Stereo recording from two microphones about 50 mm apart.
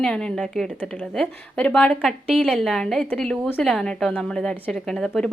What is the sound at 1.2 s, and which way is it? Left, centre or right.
A woman's voice, left.